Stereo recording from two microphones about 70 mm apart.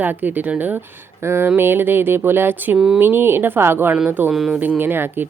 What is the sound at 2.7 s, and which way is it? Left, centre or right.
Speech, centre.